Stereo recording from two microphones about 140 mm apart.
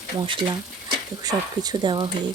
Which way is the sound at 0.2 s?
35° right (ahead or behind).